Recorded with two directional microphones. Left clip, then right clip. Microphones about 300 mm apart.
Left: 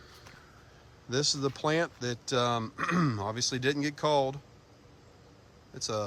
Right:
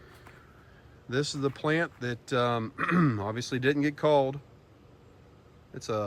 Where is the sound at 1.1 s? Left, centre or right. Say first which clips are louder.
Even; centre.